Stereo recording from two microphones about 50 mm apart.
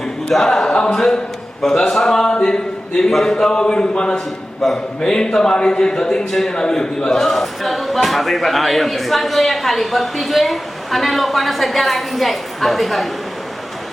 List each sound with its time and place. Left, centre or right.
0.3 s music: centre
0.8 s speech: centre
1.6 s a sound: centre
3.1 s speech: centre
4.6 s speech: centre